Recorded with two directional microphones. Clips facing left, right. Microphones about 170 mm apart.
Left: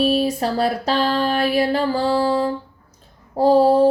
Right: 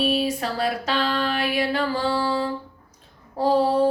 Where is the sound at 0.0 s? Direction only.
40° left (ahead or behind).